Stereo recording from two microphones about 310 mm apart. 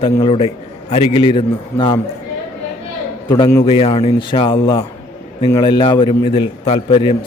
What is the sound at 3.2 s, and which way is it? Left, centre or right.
A man's voice, centre.